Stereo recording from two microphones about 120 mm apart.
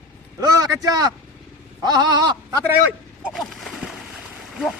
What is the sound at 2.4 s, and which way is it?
Speech, 25° right (ahead or behind).